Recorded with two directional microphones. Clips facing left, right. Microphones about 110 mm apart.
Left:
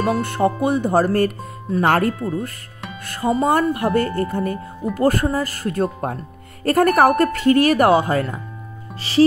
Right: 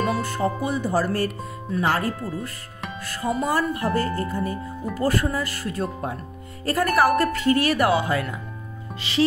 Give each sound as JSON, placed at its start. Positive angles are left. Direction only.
{"t": 0.1, "sound": "speech", "side_deg": 60}
{"t": 9.1, "sound": "music", "side_deg": 35}